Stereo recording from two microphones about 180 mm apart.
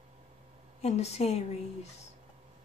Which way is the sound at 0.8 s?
35° left (ahead or behind).